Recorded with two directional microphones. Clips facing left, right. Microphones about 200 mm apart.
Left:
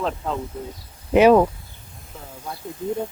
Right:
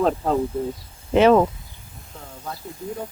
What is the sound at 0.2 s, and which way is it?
Speech, 35° right (ahead or behind).